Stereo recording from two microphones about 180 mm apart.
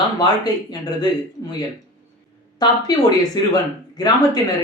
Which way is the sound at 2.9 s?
20° left (ahead or behind).